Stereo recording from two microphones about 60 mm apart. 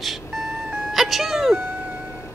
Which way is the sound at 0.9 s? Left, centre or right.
Centre.